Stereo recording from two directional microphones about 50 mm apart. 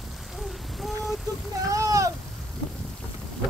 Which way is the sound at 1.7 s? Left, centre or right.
Right.